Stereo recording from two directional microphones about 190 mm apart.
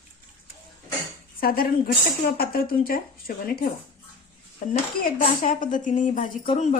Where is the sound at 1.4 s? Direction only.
50° left (ahead or behind).